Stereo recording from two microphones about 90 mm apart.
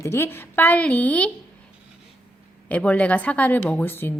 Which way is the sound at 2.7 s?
15° left (ahead or behind).